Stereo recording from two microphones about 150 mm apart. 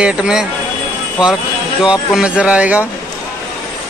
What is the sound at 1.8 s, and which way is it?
Speech, 5° right (ahead or behind).